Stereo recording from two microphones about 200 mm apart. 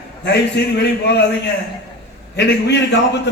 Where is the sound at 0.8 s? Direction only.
55° left (ahead or behind).